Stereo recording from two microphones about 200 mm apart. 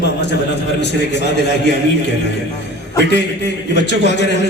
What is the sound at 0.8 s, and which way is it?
Speech, 60° left (ahead or behind).